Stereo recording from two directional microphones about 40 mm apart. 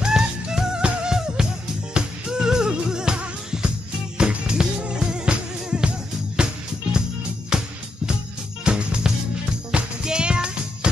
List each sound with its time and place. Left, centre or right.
0.0 s music: centre